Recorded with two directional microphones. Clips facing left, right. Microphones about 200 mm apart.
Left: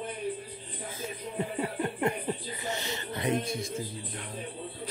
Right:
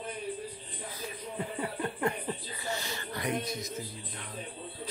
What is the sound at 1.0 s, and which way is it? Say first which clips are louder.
Music: left 4 dB; 25° left (ahead or behind).